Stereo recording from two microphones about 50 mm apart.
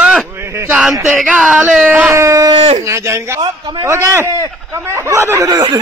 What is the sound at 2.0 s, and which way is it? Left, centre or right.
Speech, right.